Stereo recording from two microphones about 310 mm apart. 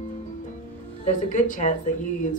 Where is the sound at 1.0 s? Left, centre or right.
Left.